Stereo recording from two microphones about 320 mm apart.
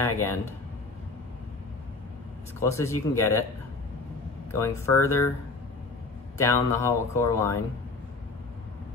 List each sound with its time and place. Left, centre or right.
0.2 s speech: centre
2.6 s speech: centre
4.5 s speech: centre
6.3 s speech: centre